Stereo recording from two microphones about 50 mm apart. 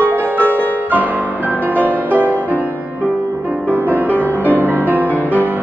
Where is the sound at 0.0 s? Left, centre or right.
Right.